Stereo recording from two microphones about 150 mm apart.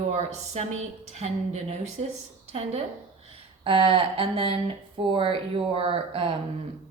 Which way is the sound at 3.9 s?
35° right (ahead or behind).